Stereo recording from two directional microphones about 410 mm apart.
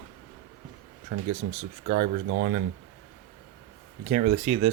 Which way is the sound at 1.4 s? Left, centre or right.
Right.